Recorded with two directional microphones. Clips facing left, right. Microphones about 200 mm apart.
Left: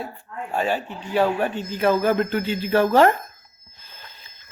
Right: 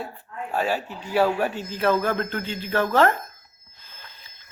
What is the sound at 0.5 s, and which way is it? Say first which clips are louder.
A man's voice: left 1 dB; 5° right (ahead or behind).